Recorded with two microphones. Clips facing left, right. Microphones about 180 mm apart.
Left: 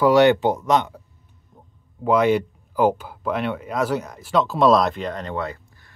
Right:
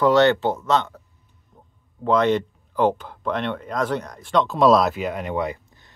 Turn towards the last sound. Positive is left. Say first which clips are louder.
# right 3 dB
turn(degrees=-15)  # may be behind; listen again after turning